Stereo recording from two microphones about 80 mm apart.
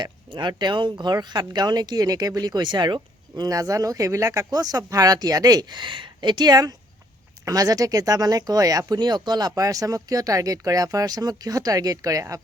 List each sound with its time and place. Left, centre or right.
0.0 s speech: right
4.5 s speech: right
9.0 s speech: right